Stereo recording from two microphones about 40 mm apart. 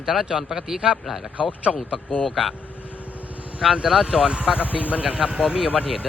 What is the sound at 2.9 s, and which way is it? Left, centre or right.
Vehicle, left.